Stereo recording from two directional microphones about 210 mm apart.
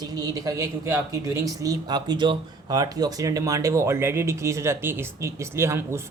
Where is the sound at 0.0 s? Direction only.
20° right (ahead or behind).